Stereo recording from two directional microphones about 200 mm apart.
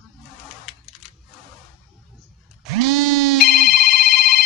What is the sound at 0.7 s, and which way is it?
Camera, centre (ahead or behind).